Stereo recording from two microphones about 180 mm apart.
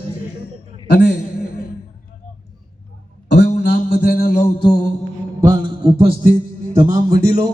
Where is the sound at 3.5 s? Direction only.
65° left (ahead or behind).